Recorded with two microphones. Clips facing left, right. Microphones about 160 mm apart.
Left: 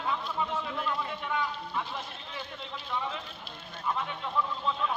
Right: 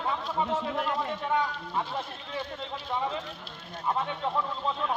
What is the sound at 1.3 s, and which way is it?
Speech, 30° right (ahead or behind).